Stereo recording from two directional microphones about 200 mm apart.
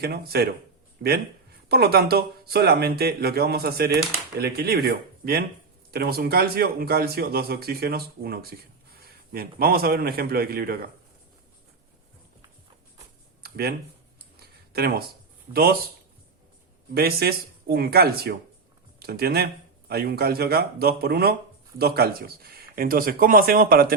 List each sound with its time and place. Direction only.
0.0 s speech: 50° right (ahead or behind)
1.7 s a man's voice: 50° right (ahead or behind)
13.4 s a sound: 50° right (ahead or behind)
15.5 s speech: 20° right (ahead or behind)
16.9 s speech: 50° right (ahead or behind)